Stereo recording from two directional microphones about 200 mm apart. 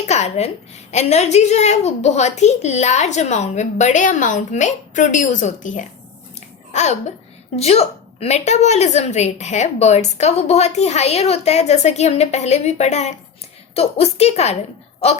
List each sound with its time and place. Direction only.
0.1 s a woman's voice: 35° left (ahead or behind)